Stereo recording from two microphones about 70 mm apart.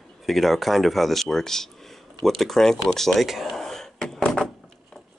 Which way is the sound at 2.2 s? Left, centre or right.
Centre.